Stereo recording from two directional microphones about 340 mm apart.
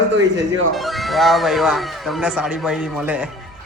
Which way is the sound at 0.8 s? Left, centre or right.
Centre.